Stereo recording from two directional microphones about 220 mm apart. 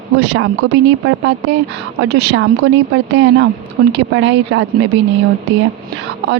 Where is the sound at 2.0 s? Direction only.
50° right (ahead or behind).